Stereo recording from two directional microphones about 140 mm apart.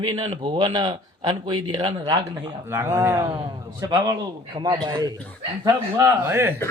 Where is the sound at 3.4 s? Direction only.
30° right (ahead or behind).